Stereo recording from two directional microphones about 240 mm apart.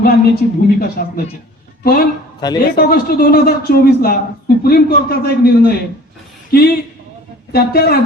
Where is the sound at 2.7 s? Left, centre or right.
Left.